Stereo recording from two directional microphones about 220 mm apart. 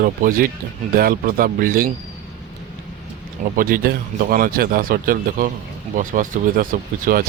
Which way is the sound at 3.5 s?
45° right (ahead or behind).